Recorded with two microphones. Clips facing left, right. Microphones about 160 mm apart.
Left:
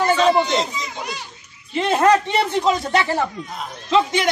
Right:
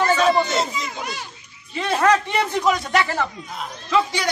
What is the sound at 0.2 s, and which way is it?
Speech, 5° right (ahead or behind).